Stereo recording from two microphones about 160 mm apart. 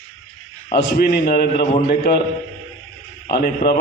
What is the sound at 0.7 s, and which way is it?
Speech, 90° left.